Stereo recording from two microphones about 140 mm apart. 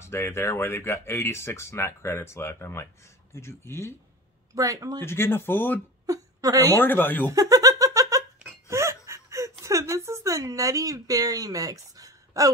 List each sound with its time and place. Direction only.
0.0 s speech: 20° left (ahead or behind)
4.6 s speech: 25° right (ahead or behind)
5.0 s speech: 15° left (ahead or behind)
6.0 s whimper: 25° right (ahead or behind)
6.8 s speech: 15° left (ahead or behind)
7.2 s laughter: 25° right (ahead or behind)
8.6 s whimper: 20° right (ahead or behind)